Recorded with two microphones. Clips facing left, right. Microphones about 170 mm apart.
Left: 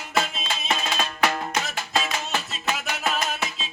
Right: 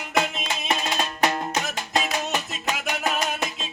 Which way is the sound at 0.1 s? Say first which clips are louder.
Right 1 dB; 15° right (ahead or behind).